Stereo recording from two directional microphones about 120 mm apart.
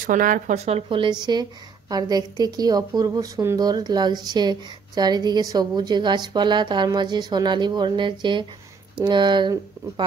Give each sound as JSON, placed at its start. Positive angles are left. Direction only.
{"t": 0.1, "sound": "a woman's voice", "side_deg": -90}
{"t": 1.2, "sound": "a woman's voice", "side_deg": -35}